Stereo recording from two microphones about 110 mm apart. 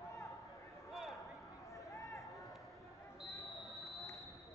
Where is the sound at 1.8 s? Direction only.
30° left (ahead or behind).